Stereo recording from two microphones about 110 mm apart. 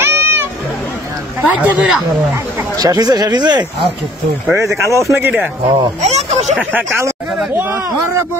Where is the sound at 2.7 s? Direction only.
35° right (ahead or behind).